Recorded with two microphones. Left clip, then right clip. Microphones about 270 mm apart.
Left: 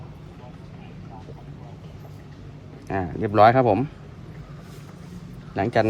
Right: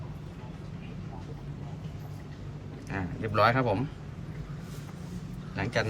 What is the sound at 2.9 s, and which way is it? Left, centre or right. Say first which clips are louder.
Speech: left 9 dB; left.